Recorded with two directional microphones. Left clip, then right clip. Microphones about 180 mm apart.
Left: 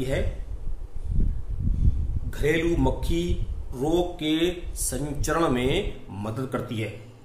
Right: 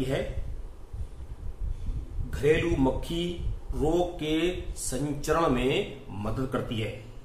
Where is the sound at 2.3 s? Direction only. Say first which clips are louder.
Left 1 dB; 35° left (ahead or behind).